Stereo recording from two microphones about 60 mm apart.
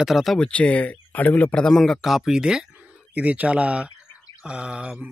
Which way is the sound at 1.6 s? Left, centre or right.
Centre.